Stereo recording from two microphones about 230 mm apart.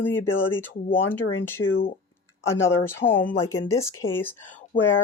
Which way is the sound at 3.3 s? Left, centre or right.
Centre.